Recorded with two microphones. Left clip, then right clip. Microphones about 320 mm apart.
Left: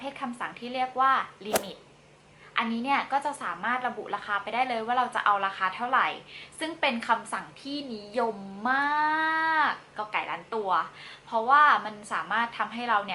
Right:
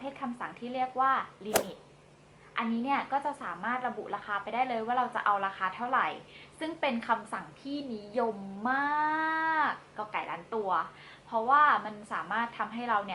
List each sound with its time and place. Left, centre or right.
0.0 s a woman's voice: centre
2.6 s a woman's voice: centre
11.3 s a woman's voice: right
11.5 s a woman's voice: centre